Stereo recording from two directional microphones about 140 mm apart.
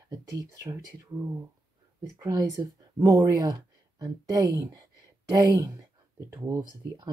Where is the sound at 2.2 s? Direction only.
25° right (ahead or behind).